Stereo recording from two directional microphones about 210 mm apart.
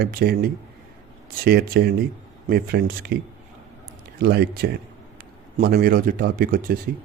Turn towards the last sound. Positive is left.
turn(degrees=-45)  # may be behind; listen again after turning